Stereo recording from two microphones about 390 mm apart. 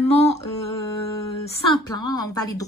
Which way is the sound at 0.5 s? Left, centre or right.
Left.